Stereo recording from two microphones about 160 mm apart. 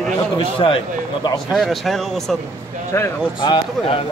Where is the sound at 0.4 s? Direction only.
35° left (ahead or behind).